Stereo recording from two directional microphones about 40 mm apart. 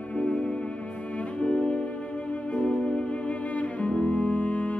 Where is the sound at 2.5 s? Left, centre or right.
Left.